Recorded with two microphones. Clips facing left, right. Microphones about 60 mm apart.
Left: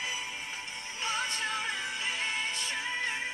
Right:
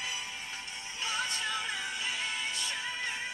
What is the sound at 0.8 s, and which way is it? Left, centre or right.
Music, left.